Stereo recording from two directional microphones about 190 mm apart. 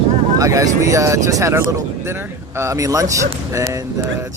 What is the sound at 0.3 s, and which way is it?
Speech, 20° right (ahead or behind).